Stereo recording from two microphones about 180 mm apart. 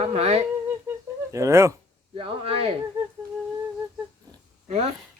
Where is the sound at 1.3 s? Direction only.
15° right (ahead or behind).